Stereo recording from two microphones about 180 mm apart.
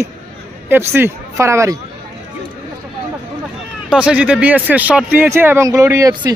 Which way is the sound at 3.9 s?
5° right (ahead or behind).